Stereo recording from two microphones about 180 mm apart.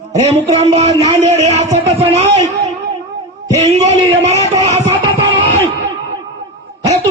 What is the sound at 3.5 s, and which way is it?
A man's voice, 40° right (ahead or behind).